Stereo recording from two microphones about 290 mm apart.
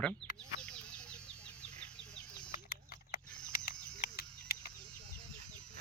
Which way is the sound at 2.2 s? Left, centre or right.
Centre.